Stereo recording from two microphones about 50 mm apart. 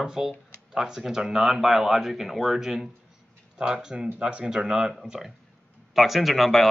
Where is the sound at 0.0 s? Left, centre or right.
Centre.